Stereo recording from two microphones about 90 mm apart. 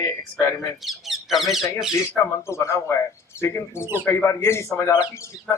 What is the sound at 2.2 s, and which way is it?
A man's voice, 30° left (ahead or behind).